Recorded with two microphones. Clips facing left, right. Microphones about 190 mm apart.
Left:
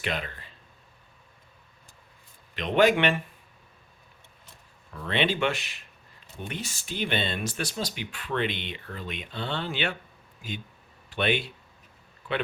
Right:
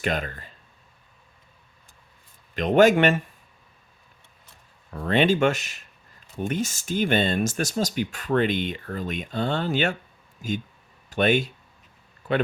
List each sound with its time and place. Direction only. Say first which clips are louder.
0.0 s speech: right 5 dB; 45° right (ahead or behind)
2.6 s speech: right 5 dB; 45° right (ahead or behind)
4.9 s speech: right 6 dB; 45° right (ahead or behind)
11.1 s speech: right 6 dB; 45° right (ahead or behind)